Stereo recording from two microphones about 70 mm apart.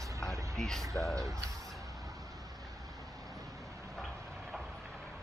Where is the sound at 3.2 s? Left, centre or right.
Centre.